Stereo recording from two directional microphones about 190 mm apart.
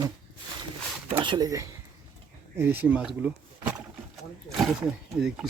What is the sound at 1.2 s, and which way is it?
Speech, 20° right (ahead or behind).